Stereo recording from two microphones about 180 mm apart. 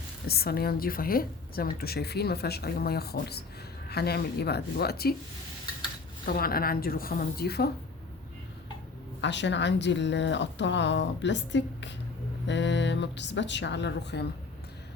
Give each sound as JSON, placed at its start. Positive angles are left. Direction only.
{"t": 0.3, "sound": "a woman's voice", "side_deg": 60}
{"t": 6.2, "sound": "a woman's voice", "side_deg": 55}
{"t": 9.2, "sound": "a woman's voice", "side_deg": 80}